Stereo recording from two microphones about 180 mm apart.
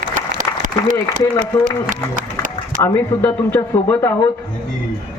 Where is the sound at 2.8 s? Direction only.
10° left (ahead or behind).